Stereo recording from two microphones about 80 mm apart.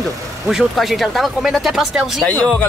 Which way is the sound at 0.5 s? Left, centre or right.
Centre.